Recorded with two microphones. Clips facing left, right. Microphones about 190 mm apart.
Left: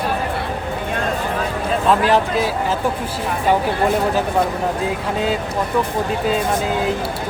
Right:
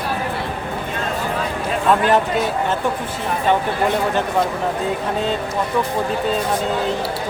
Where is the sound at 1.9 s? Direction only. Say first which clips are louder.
Even; centre (ahead or behind).